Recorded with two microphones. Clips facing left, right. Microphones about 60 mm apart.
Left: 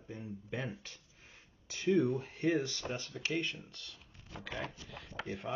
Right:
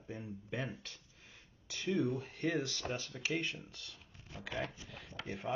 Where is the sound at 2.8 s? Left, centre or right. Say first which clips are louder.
Even; centre.